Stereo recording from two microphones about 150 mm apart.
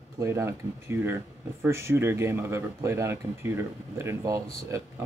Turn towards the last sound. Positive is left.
turn(degrees=-15)  # may be behind; listen again after turning